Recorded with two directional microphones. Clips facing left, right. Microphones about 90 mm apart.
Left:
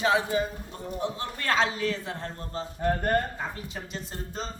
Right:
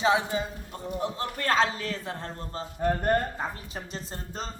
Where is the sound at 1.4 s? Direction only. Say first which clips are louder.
Even; 35° right (ahead or behind).